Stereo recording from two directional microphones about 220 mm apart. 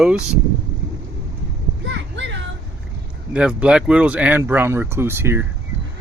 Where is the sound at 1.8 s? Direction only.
55° right (ahead or behind).